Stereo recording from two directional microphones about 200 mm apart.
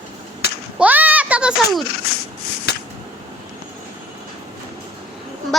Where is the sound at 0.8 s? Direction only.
10° right (ahead or behind).